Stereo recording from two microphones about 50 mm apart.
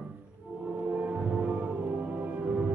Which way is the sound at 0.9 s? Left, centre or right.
Right.